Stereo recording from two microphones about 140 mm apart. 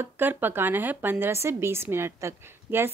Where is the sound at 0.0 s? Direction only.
15° right (ahead or behind).